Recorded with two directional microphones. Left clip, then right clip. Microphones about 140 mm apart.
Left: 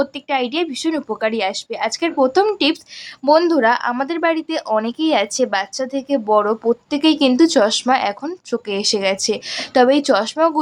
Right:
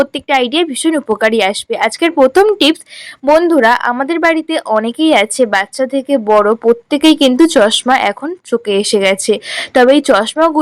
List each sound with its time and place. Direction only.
0.0 s speech: 30° right (ahead or behind)
3.2 s speech: 20° right (ahead or behind)
3.6 s speech: 30° right (ahead or behind)